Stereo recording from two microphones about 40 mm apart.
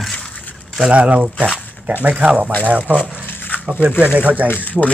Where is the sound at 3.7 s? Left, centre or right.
Right.